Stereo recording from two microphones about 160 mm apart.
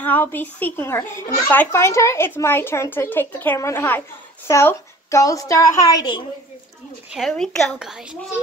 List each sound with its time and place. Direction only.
0.0 s a woman's voice: 10° left (ahead or behind)
7.1 s a woman's voice: centre (ahead or behind)